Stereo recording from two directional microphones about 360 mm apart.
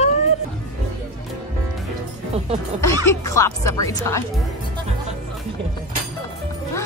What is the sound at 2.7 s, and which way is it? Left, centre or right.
Speech, centre.